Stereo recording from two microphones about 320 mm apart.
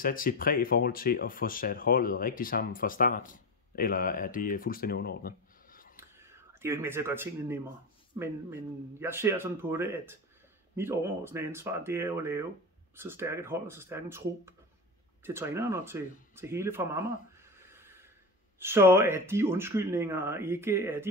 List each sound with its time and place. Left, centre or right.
0.0 s speech: left
5.9 s a sound: centre
8.1 s speech: centre